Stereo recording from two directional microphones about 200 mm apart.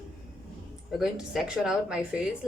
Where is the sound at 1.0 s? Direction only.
Centre (ahead or behind).